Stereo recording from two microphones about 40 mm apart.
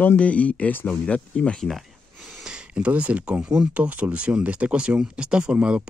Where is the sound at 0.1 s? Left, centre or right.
Left.